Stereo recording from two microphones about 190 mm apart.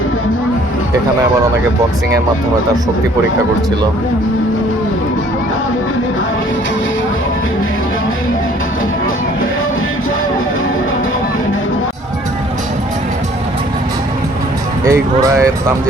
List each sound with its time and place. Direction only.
14.8 s speech: 15° right (ahead or behind)